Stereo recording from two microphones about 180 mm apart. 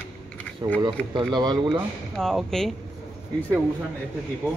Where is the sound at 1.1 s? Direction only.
20° right (ahead or behind).